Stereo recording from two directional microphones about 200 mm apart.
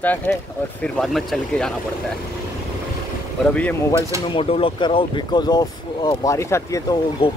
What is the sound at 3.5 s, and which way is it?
Speech, 10° left (ahead or behind).